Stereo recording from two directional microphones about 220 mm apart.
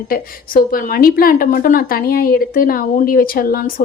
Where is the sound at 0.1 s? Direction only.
40° left (ahead or behind).